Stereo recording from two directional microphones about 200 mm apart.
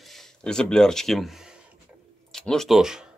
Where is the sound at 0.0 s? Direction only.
Centre (ahead or behind).